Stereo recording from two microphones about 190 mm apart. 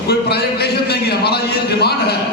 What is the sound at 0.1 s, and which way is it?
A man's voice, 60° left (ahead or behind).